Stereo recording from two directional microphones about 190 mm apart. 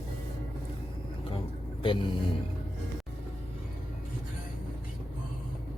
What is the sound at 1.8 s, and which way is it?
Speech, 25° left (ahead or behind).